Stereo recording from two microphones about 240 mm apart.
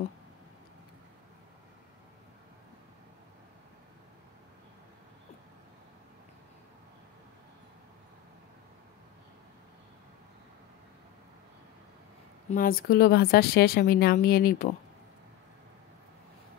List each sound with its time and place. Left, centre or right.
12.4 s speech: left